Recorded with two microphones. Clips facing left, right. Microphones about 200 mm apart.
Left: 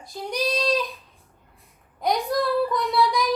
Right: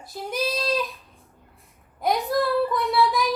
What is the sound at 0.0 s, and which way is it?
Child singing, 5° right (ahead or behind).